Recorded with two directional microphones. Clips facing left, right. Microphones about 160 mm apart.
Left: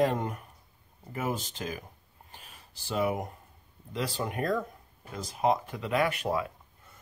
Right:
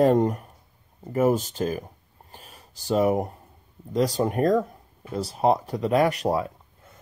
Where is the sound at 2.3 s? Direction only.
40° right (ahead or behind).